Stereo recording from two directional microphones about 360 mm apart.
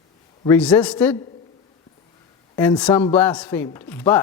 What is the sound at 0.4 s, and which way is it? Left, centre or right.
Speech, centre.